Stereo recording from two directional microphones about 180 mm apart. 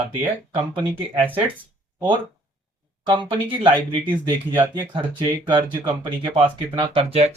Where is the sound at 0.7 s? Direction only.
25° right (ahead or behind).